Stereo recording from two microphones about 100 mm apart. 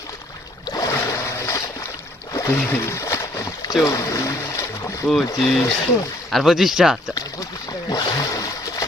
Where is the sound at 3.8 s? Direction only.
30° left (ahead or behind).